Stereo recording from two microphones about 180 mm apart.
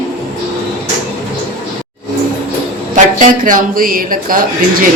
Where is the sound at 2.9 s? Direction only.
45° right (ahead or behind).